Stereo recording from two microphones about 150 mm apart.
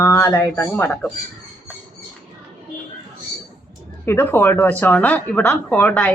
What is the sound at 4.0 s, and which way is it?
Speech, 15° left (ahead or behind).